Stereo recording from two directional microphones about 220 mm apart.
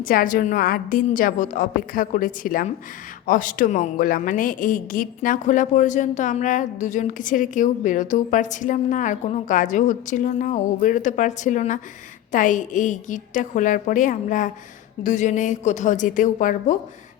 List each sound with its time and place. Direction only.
0.0 s a woman's voice: 40° left (ahead or behind)